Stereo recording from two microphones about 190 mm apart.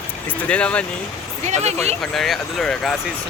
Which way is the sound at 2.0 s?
Centre (ahead or behind).